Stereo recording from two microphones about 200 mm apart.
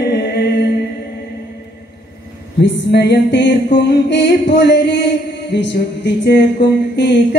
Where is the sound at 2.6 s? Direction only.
60° left (ahead or behind).